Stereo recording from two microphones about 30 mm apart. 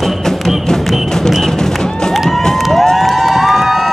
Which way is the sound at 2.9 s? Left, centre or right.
Centre.